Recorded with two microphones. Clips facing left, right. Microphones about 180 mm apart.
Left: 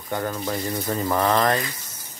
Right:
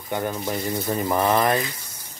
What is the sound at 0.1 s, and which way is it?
Speech, 15° right (ahead or behind).